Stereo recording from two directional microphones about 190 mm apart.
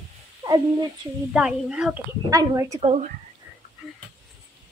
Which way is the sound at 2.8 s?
35° right (ahead or behind).